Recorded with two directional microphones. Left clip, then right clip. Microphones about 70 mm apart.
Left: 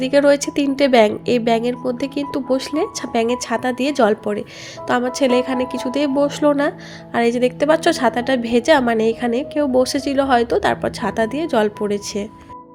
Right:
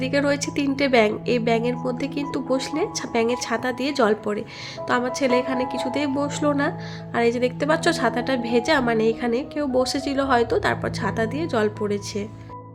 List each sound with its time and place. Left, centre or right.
0.0 s a woman's voice: left